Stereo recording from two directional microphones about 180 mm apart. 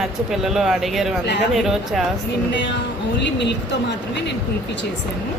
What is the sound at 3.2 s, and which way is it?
Speech, 75° left (ahead or behind).